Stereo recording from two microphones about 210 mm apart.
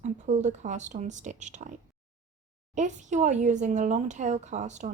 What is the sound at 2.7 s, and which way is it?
Speech, 35° right (ahead or behind).